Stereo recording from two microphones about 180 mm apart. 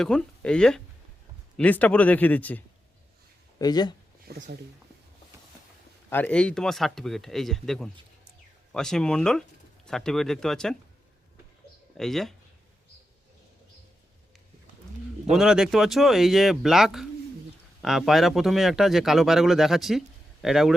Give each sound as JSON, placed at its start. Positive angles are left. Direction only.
{"t": 0.0, "sound": "speech", "side_deg": 5}
{"t": 3.6, "sound": "speech", "side_deg": 20}
{"t": 4.3, "sound": "speech", "side_deg": -70}
{"t": 6.1, "sound": "speech", "side_deg": 10}
{"t": 11.9, "sound": "speech", "side_deg": 0}
{"t": 15.3, "sound": "speech", "side_deg": -5}